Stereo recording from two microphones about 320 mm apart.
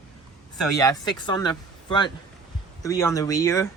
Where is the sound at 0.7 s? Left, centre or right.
Centre.